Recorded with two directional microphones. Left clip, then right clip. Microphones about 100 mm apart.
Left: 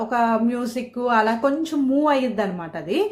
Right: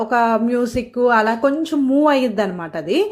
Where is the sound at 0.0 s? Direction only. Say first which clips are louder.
Right 4 dB; 35° right (ahead or behind).